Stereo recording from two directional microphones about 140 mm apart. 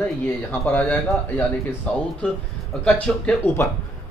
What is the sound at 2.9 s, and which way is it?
Speech, 5° left (ahead or behind).